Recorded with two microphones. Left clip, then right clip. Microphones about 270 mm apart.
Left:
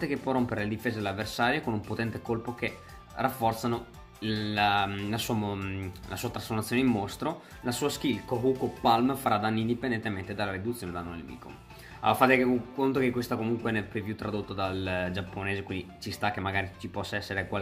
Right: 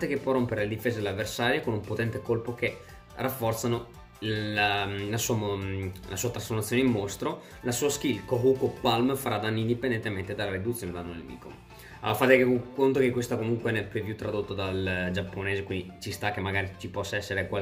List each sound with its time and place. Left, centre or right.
0.0 s speech: centre
12.0 s speech: centre